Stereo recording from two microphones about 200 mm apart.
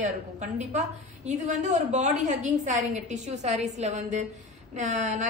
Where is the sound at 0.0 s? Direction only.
35° right (ahead or behind).